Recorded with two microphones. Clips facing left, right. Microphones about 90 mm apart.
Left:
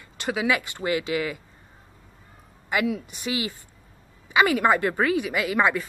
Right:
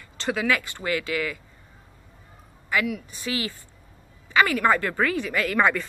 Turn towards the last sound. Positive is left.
turn(degrees=10)  # may be behind; listen again after turning